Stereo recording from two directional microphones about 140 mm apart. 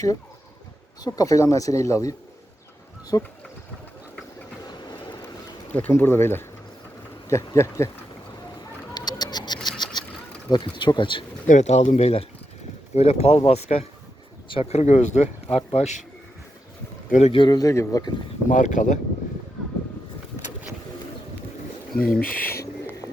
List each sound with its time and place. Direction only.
1.0 s speech: 25° left (ahead or behind)
5.7 s speech: 15° left (ahead or behind)
9.0 s a sound: 30° left (ahead or behind)
10.5 s speech: 35° left (ahead or behind)
11.4 s speech: 55° left (ahead or behind)
17.1 s speech: 55° left (ahead or behind)
17.3 s speech: 30° left (ahead or behind)
18.4 s speech: 65° left (ahead or behind)
22.2 s speech: 90° left